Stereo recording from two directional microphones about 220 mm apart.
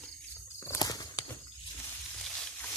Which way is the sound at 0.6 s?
15° left (ahead or behind).